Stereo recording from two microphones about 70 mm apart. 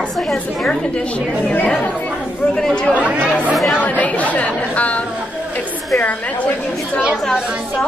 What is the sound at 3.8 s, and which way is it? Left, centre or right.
Chatter, left.